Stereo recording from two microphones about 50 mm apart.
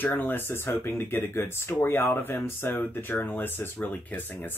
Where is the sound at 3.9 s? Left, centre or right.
Left.